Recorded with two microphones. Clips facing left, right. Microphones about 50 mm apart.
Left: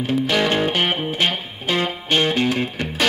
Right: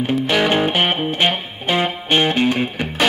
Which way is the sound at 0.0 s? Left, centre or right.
Centre.